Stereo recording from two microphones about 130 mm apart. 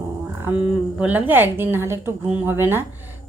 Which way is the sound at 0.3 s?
15° right (ahead or behind).